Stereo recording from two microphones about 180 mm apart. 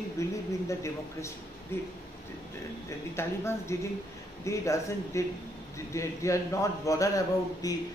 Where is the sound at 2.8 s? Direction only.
15° left (ahead or behind).